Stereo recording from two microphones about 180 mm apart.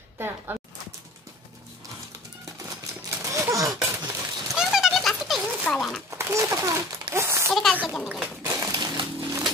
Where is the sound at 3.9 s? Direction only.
20° right (ahead or behind).